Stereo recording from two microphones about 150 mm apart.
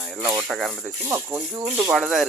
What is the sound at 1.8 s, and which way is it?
Speech, 5° right (ahead or behind).